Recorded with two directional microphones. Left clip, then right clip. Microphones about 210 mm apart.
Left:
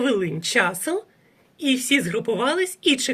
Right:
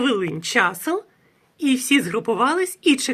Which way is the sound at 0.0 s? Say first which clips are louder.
Right 1 dB; 10° right (ahead or behind).